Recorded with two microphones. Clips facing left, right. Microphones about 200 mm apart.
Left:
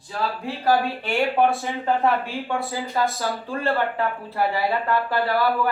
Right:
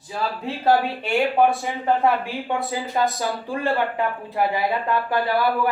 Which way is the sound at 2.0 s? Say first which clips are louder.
Right 1 dB; 20° right (ahead or behind).